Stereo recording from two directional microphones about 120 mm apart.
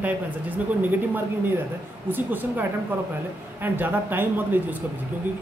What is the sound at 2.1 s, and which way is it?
Speech, 15° right (ahead or behind).